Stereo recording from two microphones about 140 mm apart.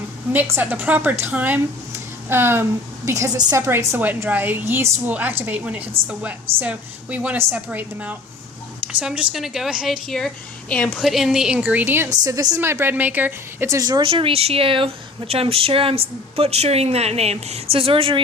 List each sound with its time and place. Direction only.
0.3 s a woman's voice: 15° right (ahead or behind)
12.2 s a woman's voice: 25° right (ahead or behind)
14.1 s speech: 40° right (ahead or behind)